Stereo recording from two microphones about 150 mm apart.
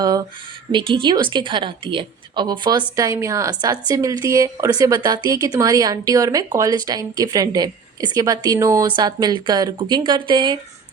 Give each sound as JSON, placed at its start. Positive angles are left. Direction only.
{"t": 0.0, "sound": "a woman's voice", "side_deg": -25}